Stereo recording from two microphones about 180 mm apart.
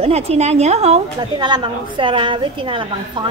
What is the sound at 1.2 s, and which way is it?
A woman's voice, 25° right (ahead or behind).